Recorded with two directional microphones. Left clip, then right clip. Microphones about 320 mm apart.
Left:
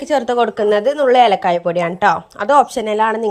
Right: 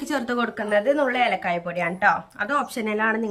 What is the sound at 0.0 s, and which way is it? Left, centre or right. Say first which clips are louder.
A woman's voice: left 10 dB; centre.